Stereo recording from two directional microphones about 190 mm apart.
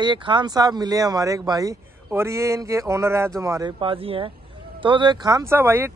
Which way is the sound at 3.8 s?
30° right (ahead or behind).